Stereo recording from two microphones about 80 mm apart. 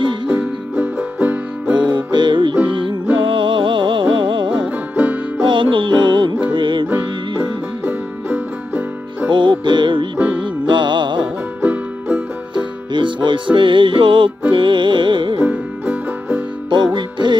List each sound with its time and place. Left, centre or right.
0.0 s music: right
0.3 s music: centre
1.8 s music: right
4.6 s music: centre
5.4 s music: right
7.8 s music: right
9.3 s music: right
11.6 s music: centre
12.9 s music: right
15.4 s music: centre
16.7 s music: right